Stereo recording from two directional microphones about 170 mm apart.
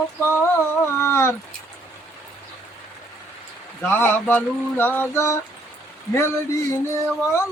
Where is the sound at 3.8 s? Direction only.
10° left (ahead or behind).